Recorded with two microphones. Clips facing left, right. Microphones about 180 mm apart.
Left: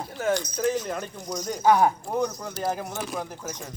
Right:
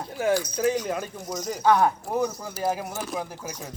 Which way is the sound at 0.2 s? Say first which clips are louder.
Right 2 dB; 10° right (ahead or behind).